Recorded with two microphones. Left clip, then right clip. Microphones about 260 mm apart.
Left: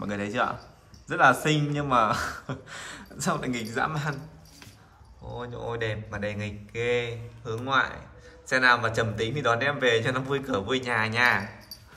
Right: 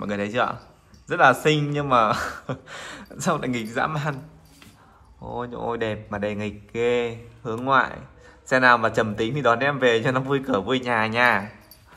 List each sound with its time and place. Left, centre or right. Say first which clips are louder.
0.0 s speech: right 4 dB; centre
5.4 s a man's voice: right 5 dB; centre